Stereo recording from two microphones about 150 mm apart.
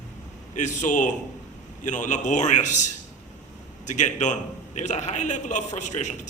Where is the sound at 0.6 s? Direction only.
55° left (ahead or behind).